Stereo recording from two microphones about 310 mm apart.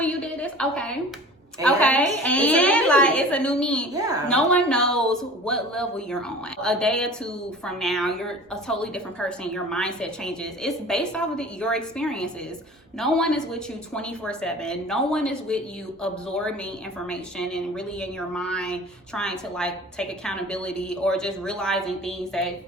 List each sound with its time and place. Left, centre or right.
0.0 s a sound: centre
1.6 s speech: centre
3.9 s a woman's voice: centre
4.3 s speech: centre